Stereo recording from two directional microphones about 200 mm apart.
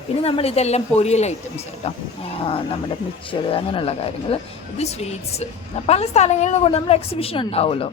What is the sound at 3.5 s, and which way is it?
A woman's voice, 25° left (ahead or behind).